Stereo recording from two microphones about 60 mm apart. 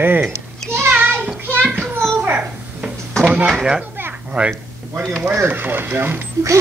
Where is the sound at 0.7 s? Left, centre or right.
Right.